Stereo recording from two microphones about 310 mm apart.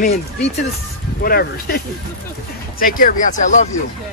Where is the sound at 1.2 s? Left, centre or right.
Left.